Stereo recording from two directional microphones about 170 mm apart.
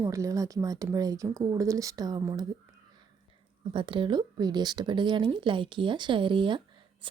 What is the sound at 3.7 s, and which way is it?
Speech, 30° right (ahead or behind).